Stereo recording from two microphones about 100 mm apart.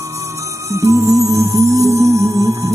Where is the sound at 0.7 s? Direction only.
30° right (ahead or behind).